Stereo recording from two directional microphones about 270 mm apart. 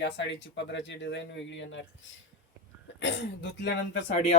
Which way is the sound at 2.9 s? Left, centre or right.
Left.